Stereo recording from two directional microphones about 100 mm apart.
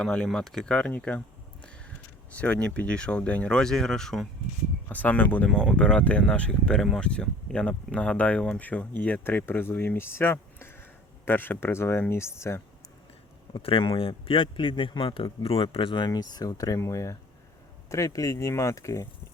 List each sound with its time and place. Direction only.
0.0 s speech: 10° left (ahead or behind)
2.3 s speech: 15° left (ahead or behind)
4.9 s speech: 15° left (ahead or behind)
13.5 s speech: 65° left (ahead or behind); by 19.0 s 30° left (ahead or behind)